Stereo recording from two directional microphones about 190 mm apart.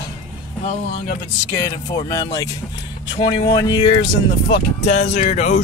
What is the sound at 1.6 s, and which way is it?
Speech, 20° left (ahead or behind).